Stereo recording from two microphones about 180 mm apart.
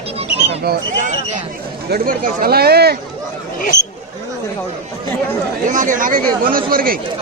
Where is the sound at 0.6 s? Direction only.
60° right (ahead or behind).